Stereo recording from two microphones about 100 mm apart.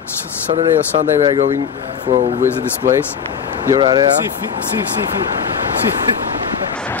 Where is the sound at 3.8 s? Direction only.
50° right (ahead or behind).